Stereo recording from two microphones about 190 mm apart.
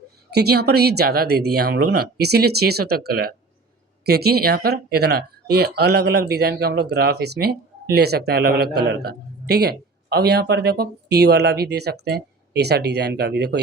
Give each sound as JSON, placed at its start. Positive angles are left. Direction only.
{"t": 0.3, "sound": "speech", "side_deg": -60}